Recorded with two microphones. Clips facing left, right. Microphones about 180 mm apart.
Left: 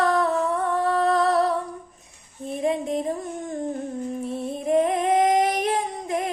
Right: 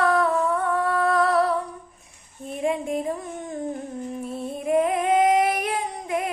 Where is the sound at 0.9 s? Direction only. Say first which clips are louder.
Left 2 dB; 40° left (ahead or behind).